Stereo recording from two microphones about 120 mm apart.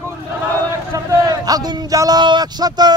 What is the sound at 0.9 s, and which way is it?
A man's voice, 30° right (ahead or behind).